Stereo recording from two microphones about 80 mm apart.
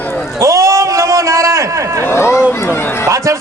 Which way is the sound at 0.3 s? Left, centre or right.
Right.